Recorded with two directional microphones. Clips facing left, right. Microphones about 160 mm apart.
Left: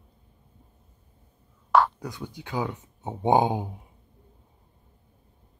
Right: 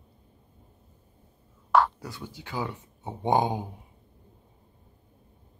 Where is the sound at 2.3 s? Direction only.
15° left (ahead or behind).